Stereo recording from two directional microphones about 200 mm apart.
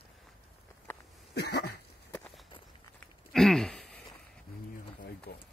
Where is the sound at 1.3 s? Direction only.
55° left (ahead or behind).